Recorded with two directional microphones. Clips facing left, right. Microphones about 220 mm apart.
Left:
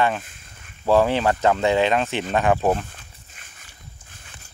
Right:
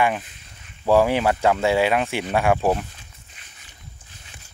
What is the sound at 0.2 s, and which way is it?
Speech, 50° left (ahead or behind).